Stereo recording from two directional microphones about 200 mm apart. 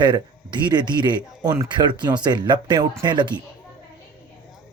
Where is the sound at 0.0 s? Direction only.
25° right (ahead or behind).